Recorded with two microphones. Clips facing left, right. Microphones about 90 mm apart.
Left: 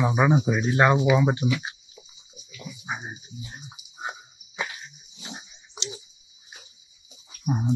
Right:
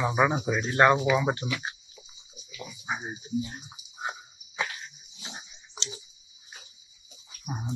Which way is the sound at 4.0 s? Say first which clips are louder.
Even; 15° left (ahead or behind).